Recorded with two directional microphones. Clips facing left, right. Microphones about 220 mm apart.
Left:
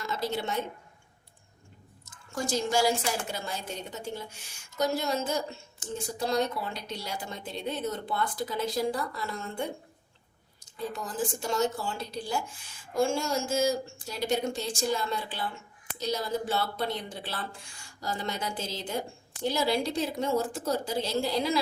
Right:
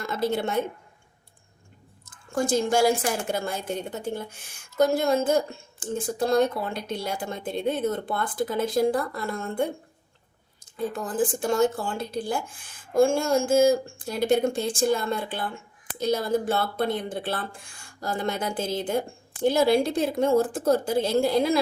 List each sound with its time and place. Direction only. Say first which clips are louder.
0.0 s a woman's voice: right 6 dB; 50° right (ahead or behind)
2.0 s a woman's voice: right 7 dB; 55° right (ahead or behind)
10.8 s a woman's voice: right 7 dB; 50° right (ahead or behind)